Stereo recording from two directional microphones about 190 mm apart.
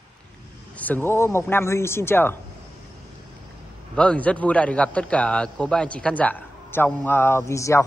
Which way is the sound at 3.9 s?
5° left (ahead or behind).